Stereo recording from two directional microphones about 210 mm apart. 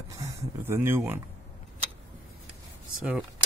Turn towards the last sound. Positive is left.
turn(degrees=-5)  # may be behind; listen again after turning